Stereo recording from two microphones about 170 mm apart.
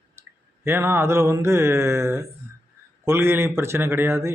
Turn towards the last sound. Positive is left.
turn(degrees=-15)  # may be behind; listen again after turning